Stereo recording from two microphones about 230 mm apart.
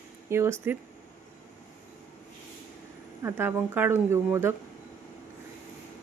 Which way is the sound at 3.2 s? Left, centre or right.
Centre.